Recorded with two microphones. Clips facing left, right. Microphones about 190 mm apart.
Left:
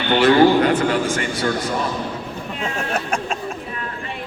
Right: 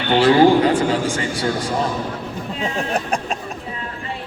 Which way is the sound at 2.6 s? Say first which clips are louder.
Right 2 dB; 15° right (ahead or behind).